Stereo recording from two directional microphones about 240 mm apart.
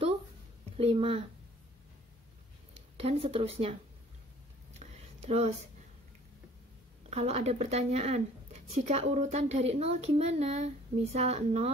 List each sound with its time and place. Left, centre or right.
0.7 s a woman's voice: right
3.0 s a woman's voice: right
4.7 s a sound: right
7.1 s a woman's voice: right